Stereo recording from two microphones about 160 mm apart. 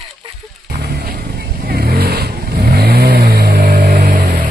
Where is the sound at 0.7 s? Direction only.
75° right (ahead or behind).